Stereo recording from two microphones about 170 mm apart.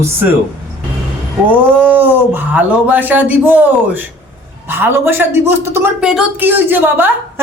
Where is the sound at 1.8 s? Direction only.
10° right (ahead or behind).